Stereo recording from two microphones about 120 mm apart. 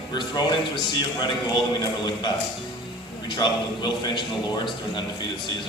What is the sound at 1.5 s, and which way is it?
Speech, 35° left (ahead or behind).